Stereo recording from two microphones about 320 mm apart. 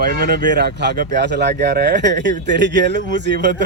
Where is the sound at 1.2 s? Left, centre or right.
Right.